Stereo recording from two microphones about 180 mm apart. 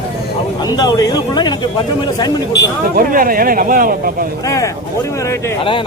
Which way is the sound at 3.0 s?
50° right (ahead or behind).